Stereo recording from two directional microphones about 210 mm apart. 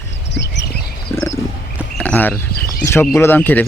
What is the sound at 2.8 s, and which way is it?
Speech, 10° left (ahead or behind).